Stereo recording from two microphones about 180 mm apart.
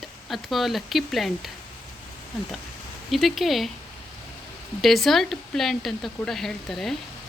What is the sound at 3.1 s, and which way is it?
Speech, centre (ahead or behind).